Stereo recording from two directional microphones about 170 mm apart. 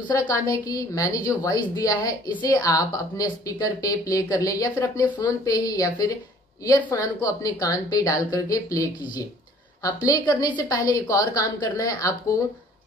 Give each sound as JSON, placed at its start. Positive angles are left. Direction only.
{"t": 0.3, "sound": "a woman's voice", "side_deg": 20}
{"t": 10.0, "sound": "a woman's voice", "side_deg": 20}